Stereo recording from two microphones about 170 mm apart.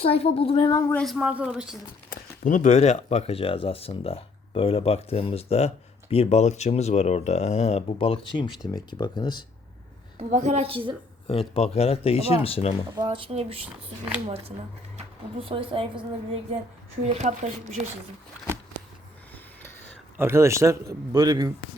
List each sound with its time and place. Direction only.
0.0 s speech: 35° left (ahead or behind)
1.0 s speech: 5° right (ahead or behind)
2.4 s speech: 50° left (ahead or behind); by 9.4 s 25° left (ahead or behind)
10.2 s speech: 45° right (ahead or behind)
11.3 s speech: 35° left (ahead or behind)
13.0 s speech: 30° right (ahead or behind)
20.1 s a man's voice: 15° right (ahead or behind)